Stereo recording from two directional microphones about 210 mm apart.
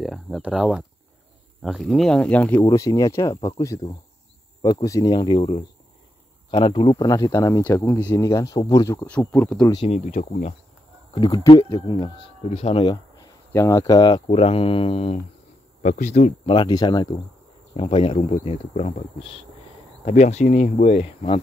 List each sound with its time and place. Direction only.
0.0 s speech: centre (ahead or behind)
9.8 s speech: 30° left (ahead or behind)
11.1 s speech: 20° left (ahead or behind)
15.8 s insect: 35° left (ahead or behind)
16.5 s speech: 20° left (ahead or behind)